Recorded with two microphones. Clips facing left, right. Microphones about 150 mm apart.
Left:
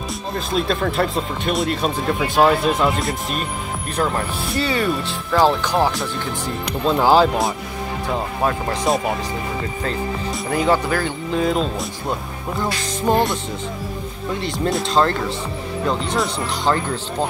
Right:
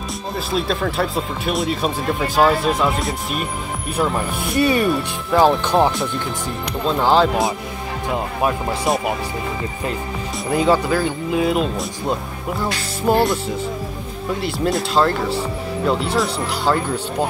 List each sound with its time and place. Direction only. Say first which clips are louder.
0.5 s speech: left 1 dB; centre (ahead or behind)
4.6 s speech: right 4 dB; 20° right (ahead or behind)
7.0 s speech: left 1 dB; 5° left (ahead or behind)
8.1 s speech: right 1 dB; 15° right (ahead or behind)
10.5 s speech: right 2 dB; 20° right (ahead or behind)
13.0 s speech: right 2 dB; 5° right (ahead or behind)
14.4 s speech: right 1 dB; 5° right (ahead or behind)